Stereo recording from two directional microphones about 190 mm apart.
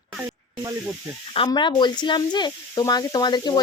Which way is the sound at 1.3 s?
25° left (ahead or behind).